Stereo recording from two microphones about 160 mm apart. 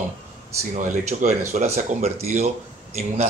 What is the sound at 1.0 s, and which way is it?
Speech, 45° right (ahead or behind).